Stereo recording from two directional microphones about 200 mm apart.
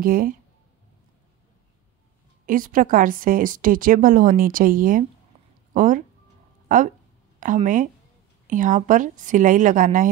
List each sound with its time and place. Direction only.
0.0 s a woman's voice: 45° right (ahead or behind)
2.4 s a woman's voice: 45° right (ahead or behind)